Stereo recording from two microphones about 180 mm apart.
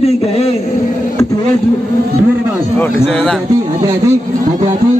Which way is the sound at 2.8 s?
5° left (ahead or behind).